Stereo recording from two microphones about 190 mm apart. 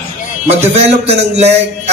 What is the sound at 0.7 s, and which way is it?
Speech, 35° right (ahead or behind).